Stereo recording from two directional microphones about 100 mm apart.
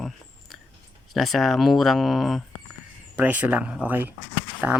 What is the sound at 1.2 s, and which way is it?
Speech, centre (ahead or behind).